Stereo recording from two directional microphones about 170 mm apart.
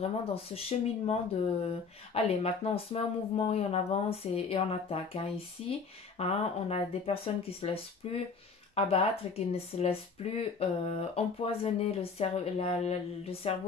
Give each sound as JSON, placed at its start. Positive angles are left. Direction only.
{"t": 0.0, "sound": "speech", "side_deg": 35}
{"t": 2.1, "sound": "speech", "side_deg": 35}